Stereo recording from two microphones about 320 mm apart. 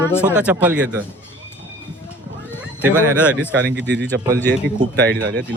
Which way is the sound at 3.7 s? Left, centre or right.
Right.